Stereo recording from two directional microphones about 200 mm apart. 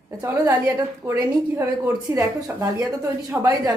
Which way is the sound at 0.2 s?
15° right (ahead or behind).